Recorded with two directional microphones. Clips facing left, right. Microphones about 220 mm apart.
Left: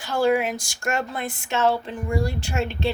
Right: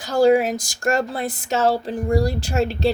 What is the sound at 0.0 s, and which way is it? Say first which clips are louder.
Speech: right 5 dB; 40° right (ahead or behind).